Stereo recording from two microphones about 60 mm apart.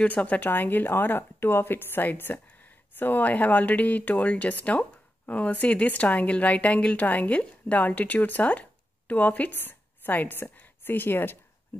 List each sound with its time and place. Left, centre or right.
0.0 s speech: left